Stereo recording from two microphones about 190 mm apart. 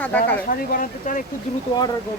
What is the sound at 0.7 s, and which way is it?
Speech, 50° left (ahead or behind).